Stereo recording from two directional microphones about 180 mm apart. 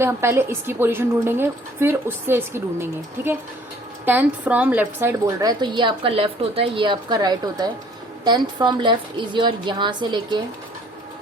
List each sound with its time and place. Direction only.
0.0 s a woman's voice: 15° right (ahead or behind)